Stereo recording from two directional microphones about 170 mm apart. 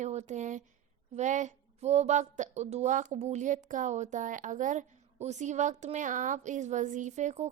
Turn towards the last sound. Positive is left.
turn(degrees=-45)  # may be behind; listen again after turning